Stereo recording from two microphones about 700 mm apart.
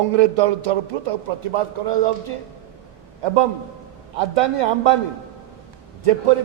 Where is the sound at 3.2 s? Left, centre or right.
Right.